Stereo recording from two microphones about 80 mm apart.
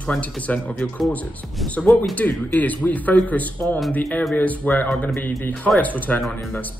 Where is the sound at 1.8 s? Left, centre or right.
Centre.